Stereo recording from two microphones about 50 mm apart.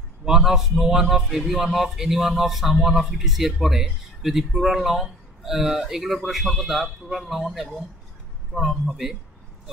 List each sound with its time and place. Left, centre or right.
0.2 s a man's voice: centre
8.5 s a man's voice: centre